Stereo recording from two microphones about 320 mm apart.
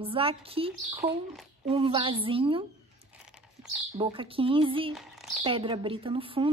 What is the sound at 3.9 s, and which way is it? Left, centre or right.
A woman's voice, centre.